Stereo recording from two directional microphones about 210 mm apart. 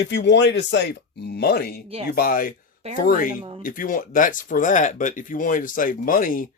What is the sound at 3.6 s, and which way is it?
Speech, 40° left (ahead or behind).